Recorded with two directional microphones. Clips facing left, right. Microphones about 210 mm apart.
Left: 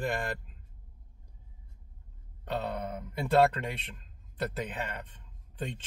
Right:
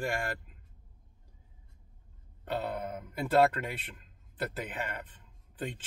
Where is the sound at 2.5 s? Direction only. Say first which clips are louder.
Even; 5° right (ahead or behind).